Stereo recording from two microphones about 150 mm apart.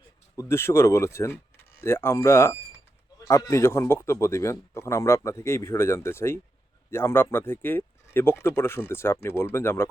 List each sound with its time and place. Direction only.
0.3 s speech: 15° left (ahead or behind)